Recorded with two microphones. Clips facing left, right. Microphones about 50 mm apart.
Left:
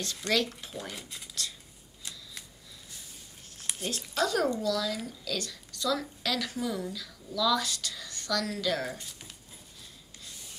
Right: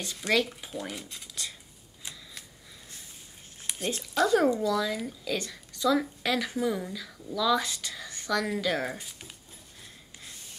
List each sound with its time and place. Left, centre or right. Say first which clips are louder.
0.0 s speech: right 2 dB; centre
0.7 s speech: right 4 dB; centre
2.0 s shuffling cards: right 1 dB; right
3.7 s a sound: right 1 dB; centre
4.3 s a woman's voice: right 6 dB; centre